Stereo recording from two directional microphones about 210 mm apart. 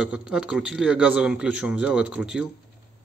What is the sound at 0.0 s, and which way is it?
A man's voice, 5° right (ahead or behind).